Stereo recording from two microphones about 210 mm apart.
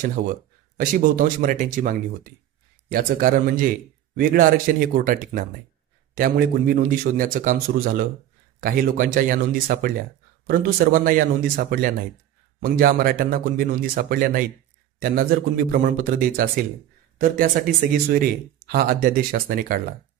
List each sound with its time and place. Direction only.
0.0 s a man's voice: 40° right (ahead or behind)